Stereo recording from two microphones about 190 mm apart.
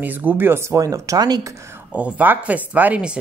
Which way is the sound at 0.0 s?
10° right (ahead or behind).